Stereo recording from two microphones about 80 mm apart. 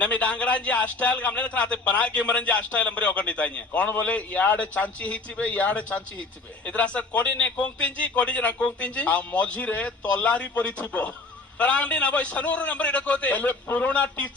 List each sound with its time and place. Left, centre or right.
0.0 s a man's voice: centre